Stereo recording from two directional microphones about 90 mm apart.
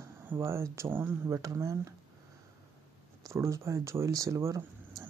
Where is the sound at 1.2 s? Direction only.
35° right (ahead or behind).